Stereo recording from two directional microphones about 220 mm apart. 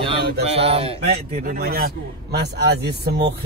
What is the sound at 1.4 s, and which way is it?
Speech, 40° right (ahead or behind).